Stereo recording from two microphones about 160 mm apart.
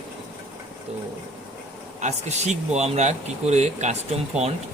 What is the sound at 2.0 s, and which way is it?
Speech, 45° right (ahead or behind).